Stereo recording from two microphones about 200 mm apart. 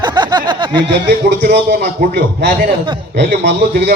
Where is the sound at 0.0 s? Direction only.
20° right (ahead or behind).